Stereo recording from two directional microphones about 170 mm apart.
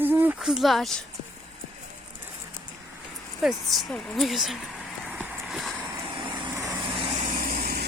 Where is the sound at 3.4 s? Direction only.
Centre (ahead or behind).